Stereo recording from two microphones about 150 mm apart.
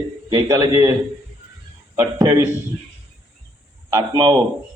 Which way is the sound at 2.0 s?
20° right (ahead or behind).